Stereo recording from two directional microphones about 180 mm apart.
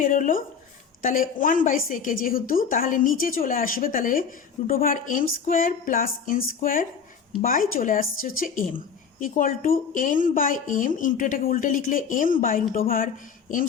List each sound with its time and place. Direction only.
0.0 s a woman's voice: 50° left (ahead or behind)